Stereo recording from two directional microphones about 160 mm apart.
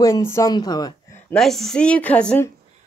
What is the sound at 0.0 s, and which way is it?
Speech, 15° left (ahead or behind).